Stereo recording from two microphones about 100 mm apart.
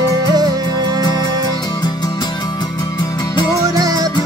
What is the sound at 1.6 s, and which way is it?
Music, 45° left (ahead or behind).